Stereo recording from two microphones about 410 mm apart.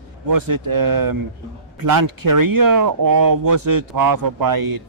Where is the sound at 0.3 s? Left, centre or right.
Right.